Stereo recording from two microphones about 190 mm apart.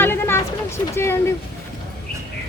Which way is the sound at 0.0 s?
10° left (ahead or behind).